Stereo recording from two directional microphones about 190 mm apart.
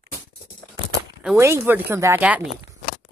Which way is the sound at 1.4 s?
15° right (ahead or behind).